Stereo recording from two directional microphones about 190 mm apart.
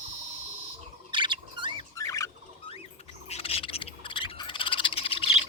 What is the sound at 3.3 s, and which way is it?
Frog, 30° left (ahead or behind).